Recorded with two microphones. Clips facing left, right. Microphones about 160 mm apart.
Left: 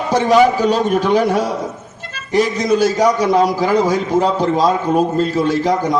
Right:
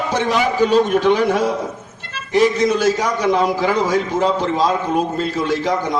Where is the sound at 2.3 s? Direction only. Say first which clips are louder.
Even; 40° left (ahead or behind).